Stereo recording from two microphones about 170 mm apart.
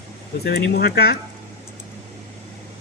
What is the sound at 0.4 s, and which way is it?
Speech, 65° left (ahead or behind).